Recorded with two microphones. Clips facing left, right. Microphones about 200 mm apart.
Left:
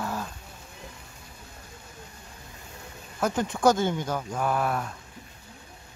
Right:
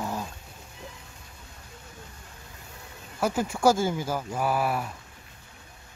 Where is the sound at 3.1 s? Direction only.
5° right (ahead or behind).